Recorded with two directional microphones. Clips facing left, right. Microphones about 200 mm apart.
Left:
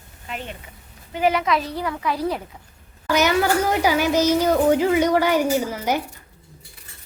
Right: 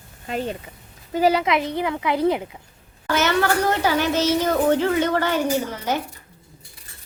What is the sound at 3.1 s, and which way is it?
A child's voice, 10° left (ahead or behind).